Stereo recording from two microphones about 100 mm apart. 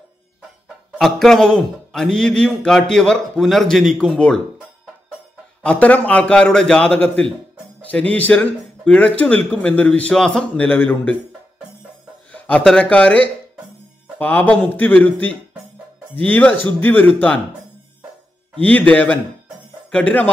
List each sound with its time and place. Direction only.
0.9 s a man's voice: 5° left (ahead or behind)
5.6 s speech: 15° left (ahead or behind)
12.3 s a sound: 15° left (ahead or behind)
12.6 s speech: 10° left (ahead or behind)
16.2 s speech: 15° left (ahead or behind)
18.7 s speech: 15° left (ahead or behind)